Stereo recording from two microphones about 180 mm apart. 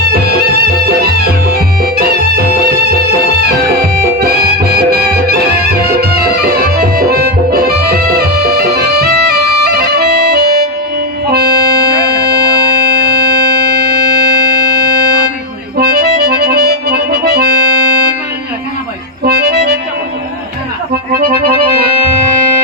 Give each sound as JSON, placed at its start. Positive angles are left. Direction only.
{"t": 0.1, "sound": "music", "side_deg": -60}
{"t": 13.7, "sound": "music", "side_deg": -60}
{"t": 15.8, "sound": "accordion", "side_deg": -65}
{"t": 19.2, "sound": "accordion", "side_deg": -60}